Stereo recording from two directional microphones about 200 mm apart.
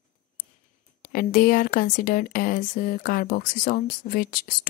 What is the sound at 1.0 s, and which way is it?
A woman's voice, 45° left (ahead or behind).